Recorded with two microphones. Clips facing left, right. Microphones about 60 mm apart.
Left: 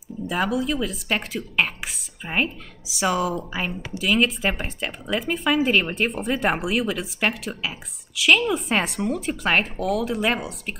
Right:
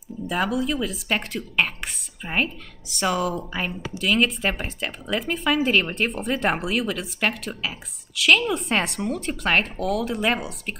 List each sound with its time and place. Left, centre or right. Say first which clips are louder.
0.3 s a woman's voice: even; centre